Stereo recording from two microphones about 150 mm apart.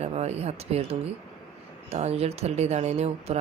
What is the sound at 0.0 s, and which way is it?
Speech, 45° right (ahead or behind).